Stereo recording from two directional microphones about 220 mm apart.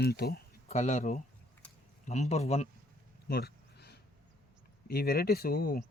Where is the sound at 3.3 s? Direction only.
45° left (ahead or behind).